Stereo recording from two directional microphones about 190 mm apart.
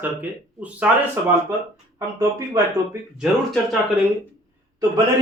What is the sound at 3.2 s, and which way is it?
Speech, centre (ahead or behind).